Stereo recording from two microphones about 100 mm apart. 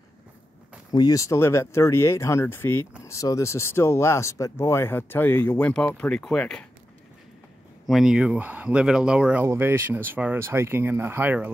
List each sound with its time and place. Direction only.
0.9 s speech: 40° left (ahead or behind); by 2.9 s 20° left (ahead or behind)
3.1 s speech: 35° left (ahead or behind); by 6.6 s 5° left (ahead or behind)
7.8 s speech: 5° right (ahead or behind)
9.4 s speech: 25° right (ahead or behind)